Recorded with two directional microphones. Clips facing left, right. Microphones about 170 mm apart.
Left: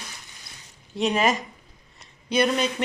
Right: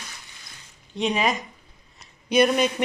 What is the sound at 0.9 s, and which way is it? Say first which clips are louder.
Speech: left 1 dB; centre (ahead or behind).